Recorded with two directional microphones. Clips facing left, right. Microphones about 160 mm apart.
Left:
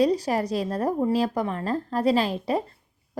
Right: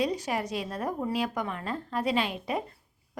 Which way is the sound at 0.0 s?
35° left (ahead or behind).